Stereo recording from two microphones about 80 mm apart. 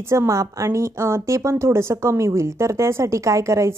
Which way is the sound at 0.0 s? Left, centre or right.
Right.